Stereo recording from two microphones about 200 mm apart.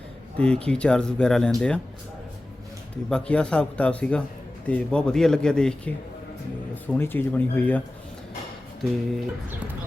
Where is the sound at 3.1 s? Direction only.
5° left (ahead or behind).